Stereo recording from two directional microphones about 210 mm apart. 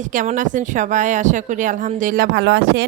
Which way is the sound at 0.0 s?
35° right (ahead or behind).